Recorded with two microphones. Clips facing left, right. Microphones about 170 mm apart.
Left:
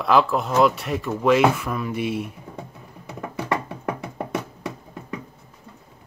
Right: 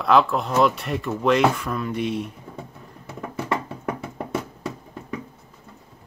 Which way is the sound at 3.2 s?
15° left (ahead or behind).